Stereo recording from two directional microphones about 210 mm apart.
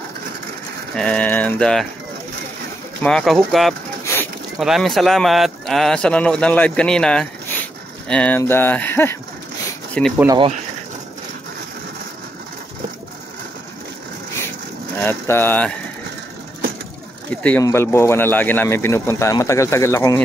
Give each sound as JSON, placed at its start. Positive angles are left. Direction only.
{"t": 0.9, "sound": "speech", "side_deg": 5}
{"t": 3.0, "sound": "speech", "side_deg": 5}
{"t": 4.0, "sound": "a sound", "side_deg": 10}
{"t": 4.6, "sound": "speech", "side_deg": 0}
{"t": 10.1, "sound": "speech", "side_deg": -20}
{"t": 15.0, "sound": "speech", "side_deg": 10}
{"t": 17.3, "sound": "speech", "side_deg": 5}